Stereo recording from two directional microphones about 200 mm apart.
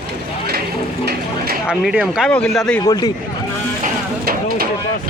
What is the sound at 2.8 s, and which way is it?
Speech, 20° left (ahead or behind).